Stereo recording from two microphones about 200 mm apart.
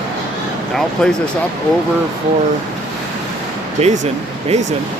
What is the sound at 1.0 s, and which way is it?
Speech, 5° left (ahead or behind).